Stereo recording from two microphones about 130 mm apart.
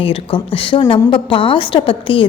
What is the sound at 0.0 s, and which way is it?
A woman's voice, 45° left (ahead or behind).